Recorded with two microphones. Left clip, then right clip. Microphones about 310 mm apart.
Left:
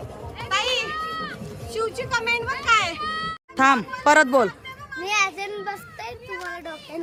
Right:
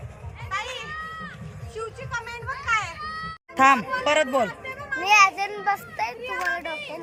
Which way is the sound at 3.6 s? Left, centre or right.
Centre.